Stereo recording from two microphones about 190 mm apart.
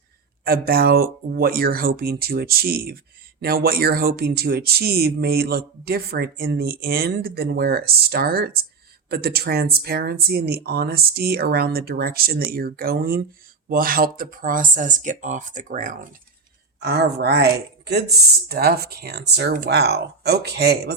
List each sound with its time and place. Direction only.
0.4 s speech: 50° right (ahead or behind)
16.8 s speech: 60° right (ahead or behind)